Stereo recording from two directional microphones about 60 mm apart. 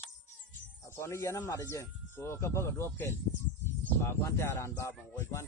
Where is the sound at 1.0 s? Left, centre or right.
Left.